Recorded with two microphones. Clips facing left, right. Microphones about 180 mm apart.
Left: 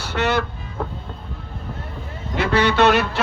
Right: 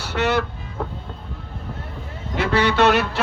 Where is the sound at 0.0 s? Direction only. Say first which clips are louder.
Even; 10° right (ahead or behind).